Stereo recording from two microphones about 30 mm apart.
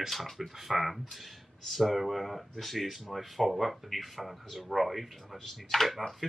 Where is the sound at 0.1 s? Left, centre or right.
Centre.